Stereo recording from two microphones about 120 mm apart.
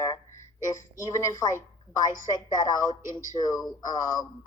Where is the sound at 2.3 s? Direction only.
35° left (ahead or behind).